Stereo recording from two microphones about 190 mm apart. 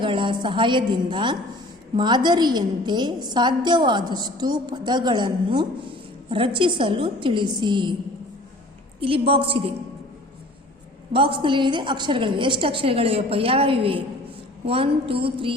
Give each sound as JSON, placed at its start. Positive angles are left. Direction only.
{"t": 0.0, "sound": "a woman's voice", "side_deg": -25}
{"t": 9.0, "sound": "a woman's voice", "side_deg": -30}
{"t": 11.1, "sound": "a woman's voice", "side_deg": -25}